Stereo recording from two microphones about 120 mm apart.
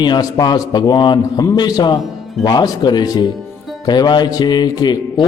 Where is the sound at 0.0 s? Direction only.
35° left (ahead or behind).